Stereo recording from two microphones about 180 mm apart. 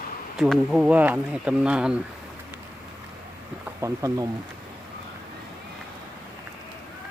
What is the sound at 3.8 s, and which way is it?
Speech, 15° right (ahead or behind).